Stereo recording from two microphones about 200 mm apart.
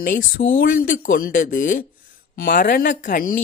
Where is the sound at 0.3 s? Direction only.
45° left (ahead or behind).